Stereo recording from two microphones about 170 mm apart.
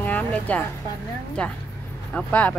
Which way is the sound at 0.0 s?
10° left (ahead or behind).